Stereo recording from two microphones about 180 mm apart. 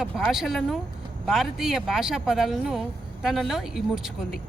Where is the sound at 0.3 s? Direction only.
Centre (ahead or behind).